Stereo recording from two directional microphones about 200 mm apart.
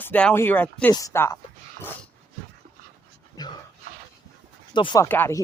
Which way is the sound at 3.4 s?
20° left (ahead or behind).